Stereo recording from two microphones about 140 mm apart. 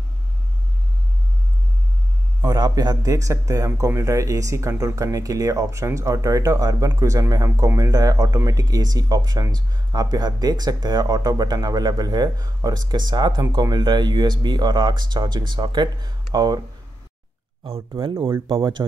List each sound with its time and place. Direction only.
2.4 s speech: 30° right (ahead or behind)
18.0 s speech: 40° right (ahead or behind)